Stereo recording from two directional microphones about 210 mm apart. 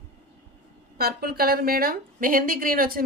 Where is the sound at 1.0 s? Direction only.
45° right (ahead or behind).